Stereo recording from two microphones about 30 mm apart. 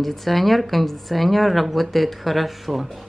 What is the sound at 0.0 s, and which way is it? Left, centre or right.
A woman's voice, centre.